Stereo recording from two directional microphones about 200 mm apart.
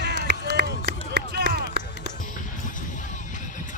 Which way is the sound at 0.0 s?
55° right (ahead or behind).